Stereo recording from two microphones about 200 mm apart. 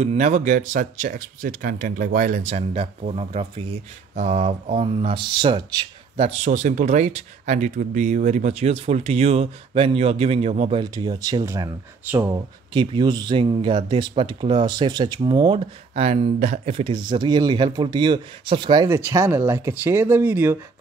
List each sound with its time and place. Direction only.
0.0 s speech: 35° right (ahead or behind)
6.2 s speech: 35° right (ahead or behind); by 12.4 s 10° right (ahead or behind)
12.7 s speech: 25° right (ahead or behind)